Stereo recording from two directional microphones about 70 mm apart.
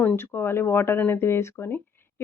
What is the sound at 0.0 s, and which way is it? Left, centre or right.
Speech, left.